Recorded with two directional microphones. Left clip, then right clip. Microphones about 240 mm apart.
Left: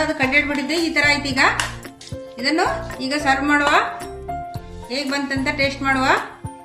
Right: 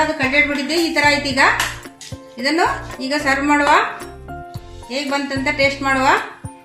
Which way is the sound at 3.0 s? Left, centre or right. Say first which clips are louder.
Right 2 dB; right.